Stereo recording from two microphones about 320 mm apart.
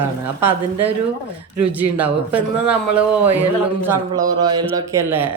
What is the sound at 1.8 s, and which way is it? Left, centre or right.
A man's voice, centre.